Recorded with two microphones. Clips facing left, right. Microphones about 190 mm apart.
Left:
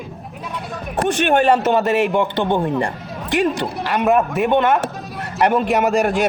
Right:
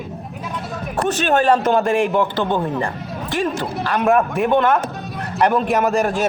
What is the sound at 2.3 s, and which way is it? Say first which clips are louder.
Speech: left 2 dB; 15° left (ahead or behind).